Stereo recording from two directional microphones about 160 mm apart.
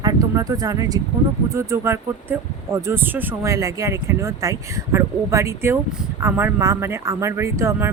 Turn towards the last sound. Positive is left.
turn(degrees=-15)  # may be behind; listen again after turning